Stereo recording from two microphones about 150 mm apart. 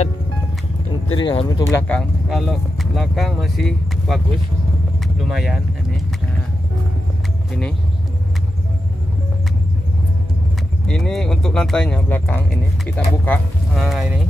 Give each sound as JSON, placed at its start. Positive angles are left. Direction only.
{"t": 1.2, "sound": "speech", "side_deg": 35}
{"t": 1.6, "sound": "speech", "side_deg": 20}
{"t": 1.9, "sound": "speech", "side_deg": 5}
{"t": 10.9, "sound": "speech", "side_deg": 5}
{"t": 13.7, "sound": "speech", "side_deg": 0}